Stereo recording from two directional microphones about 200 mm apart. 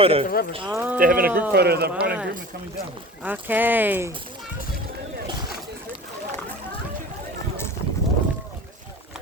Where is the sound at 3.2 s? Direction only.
10° right (ahead or behind).